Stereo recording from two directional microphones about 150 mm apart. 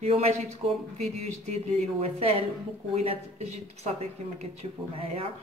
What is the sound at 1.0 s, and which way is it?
A woman's voice, 45° right (ahead or behind).